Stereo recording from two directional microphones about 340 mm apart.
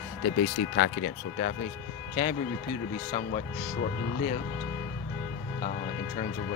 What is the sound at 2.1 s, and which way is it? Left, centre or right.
Speech, centre.